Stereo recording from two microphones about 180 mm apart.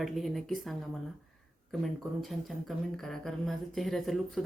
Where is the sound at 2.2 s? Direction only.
Centre (ahead or behind).